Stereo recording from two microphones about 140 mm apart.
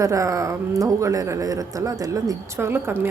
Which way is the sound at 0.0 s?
25° right (ahead or behind).